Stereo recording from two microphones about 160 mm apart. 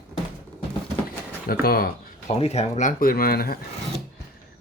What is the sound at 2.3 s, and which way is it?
Speech, 40° left (ahead or behind).